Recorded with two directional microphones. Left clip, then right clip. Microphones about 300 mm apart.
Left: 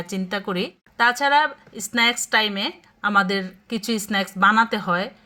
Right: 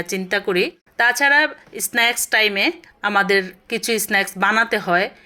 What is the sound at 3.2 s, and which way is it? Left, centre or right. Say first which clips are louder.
Speech: right 7 dB; centre.